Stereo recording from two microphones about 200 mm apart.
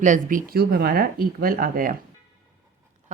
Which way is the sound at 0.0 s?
40° right (ahead or behind).